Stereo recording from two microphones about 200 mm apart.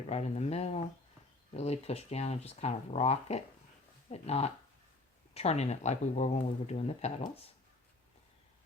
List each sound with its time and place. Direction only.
0.1 s speech: 35° left (ahead or behind)